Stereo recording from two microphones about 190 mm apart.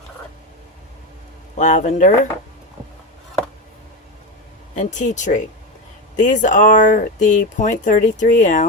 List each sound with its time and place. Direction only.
1.5 s speech: 40° left (ahead or behind)
4.7 s speech: 40° left (ahead or behind)